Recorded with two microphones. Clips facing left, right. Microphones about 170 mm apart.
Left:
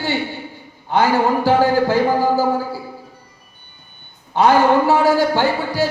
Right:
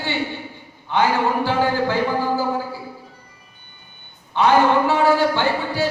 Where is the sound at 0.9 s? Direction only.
40° left (ahead or behind).